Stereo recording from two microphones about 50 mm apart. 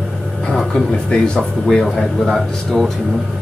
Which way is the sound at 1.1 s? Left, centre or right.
Centre.